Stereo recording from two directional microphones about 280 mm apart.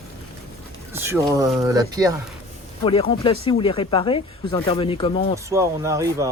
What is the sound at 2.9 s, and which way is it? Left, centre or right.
Speech, centre.